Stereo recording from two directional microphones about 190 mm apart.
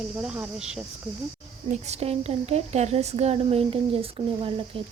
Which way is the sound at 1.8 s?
35° right (ahead or behind).